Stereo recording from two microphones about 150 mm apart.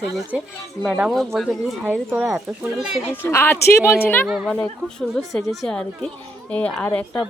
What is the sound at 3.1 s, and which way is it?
A woman's voice, 15° left (ahead or behind).